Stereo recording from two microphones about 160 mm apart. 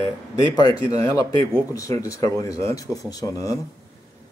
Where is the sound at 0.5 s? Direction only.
20° left (ahead or behind).